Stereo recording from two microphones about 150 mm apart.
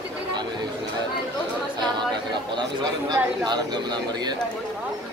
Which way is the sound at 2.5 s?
30° right (ahead or behind).